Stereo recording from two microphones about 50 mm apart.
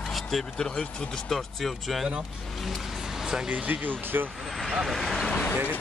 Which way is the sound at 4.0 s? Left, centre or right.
Right.